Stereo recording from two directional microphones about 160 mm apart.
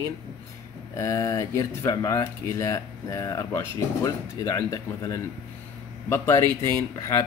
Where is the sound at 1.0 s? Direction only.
20° left (ahead or behind).